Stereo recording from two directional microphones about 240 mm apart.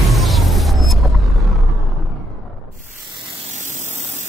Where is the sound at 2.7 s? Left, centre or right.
Right.